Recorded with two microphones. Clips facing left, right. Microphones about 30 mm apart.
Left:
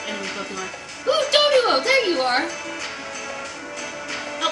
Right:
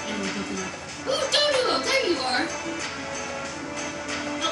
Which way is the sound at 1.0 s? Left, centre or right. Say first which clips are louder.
Left 5 dB; left.